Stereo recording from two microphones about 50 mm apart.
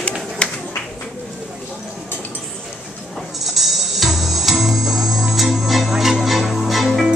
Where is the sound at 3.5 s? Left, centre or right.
Centre.